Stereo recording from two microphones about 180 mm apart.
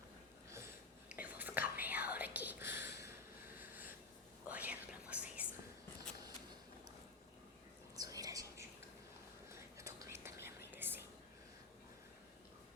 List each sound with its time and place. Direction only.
1.1 s whispering: 10° right (ahead or behind)
4.4 s whispering: 10° right (ahead or behind)
7.9 s whispering: 20° right (ahead or behind)